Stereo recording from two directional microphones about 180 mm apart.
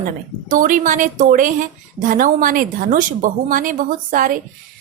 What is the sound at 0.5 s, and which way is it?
A woman's voice, 50° right (ahead or behind).